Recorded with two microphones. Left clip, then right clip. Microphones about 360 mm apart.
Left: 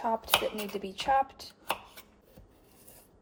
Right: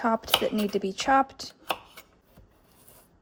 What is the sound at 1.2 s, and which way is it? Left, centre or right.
Speech, right.